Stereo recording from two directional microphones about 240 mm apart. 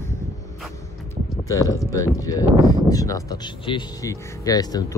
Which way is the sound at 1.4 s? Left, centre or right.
Centre.